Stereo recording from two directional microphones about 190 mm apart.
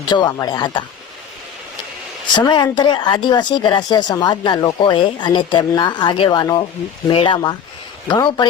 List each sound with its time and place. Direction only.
0.1 s speech: 20° left (ahead or behind)
2.3 s speech: 25° left (ahead or behind)